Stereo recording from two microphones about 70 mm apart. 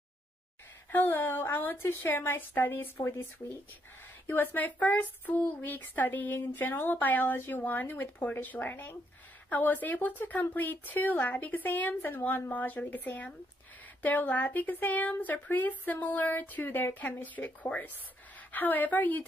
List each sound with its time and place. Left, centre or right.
0.9 s a woman's voice: left
4.3 s speech: left